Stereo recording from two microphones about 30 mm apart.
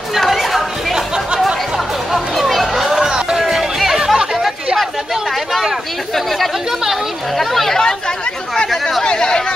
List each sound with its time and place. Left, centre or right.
0.2 s chatter: centre
0.9 s chatter: right
2.1 s chatter: centre
3.0 s music: right
3.3 s music: centre
7.3 s speech: centre
9.0 s speech: left